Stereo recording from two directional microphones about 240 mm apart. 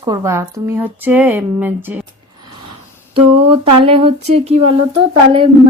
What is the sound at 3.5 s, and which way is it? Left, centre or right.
Speech, right.